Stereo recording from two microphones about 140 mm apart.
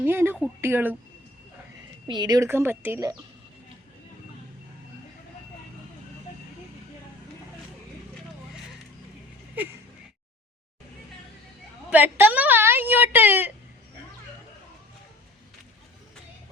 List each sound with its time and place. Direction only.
0.0 s a woman's voice: 15° right (ahead or behind)
2.0 s speech: 30° right (ahead or behind)
2.5 s a woman's voice: 15° right (ahead or behind)
11.9 s a woman's voice: 15° right (ahead or behind)